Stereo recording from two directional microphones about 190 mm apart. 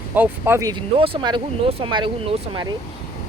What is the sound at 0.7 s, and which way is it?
Speech, 30° right (ahead or behind).